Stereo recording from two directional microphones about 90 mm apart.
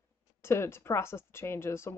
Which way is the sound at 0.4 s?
30° left (ahead or behind).